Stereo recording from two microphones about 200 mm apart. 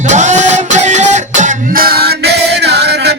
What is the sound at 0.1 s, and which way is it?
Music, 35° right (ahead or behind).